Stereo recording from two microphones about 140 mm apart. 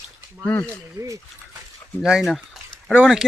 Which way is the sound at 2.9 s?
5° right (ahead or behind).